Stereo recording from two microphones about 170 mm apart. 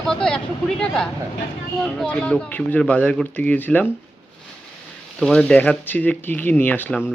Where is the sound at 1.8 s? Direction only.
5° left (ahead or behind).